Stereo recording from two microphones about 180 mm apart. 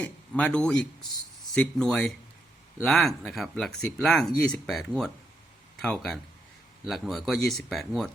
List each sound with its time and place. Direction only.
0.0 s a man's voice: 5° left (ahead or behind)